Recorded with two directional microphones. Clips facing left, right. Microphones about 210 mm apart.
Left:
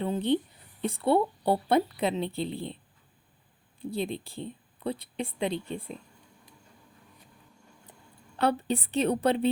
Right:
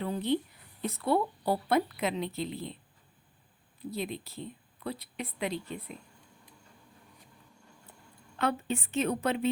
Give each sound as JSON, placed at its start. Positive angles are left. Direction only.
{"t": 0.0, "sound": "speech", "side_deg": 25}
{"t": 3.8, "sound": "speech", "side_deg": 30}
{"t": 8.4, "sound": "a woman's voice", "side_deg": 35}